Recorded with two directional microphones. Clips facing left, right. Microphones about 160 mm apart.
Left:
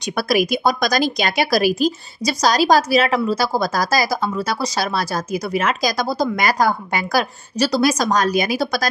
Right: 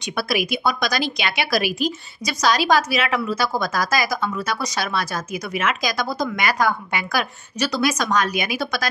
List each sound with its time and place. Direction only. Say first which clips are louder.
0.0 s speech: left 5 dB; 45° left (ahead or behind)